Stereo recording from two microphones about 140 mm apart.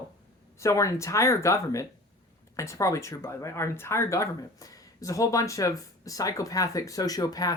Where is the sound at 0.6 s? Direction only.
20° left (ahead or behind).